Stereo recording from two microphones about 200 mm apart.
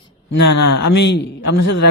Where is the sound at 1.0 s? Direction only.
60° left (ahead or behind).